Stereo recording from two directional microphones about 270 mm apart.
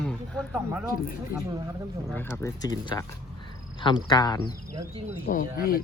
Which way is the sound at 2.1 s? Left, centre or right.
Centre.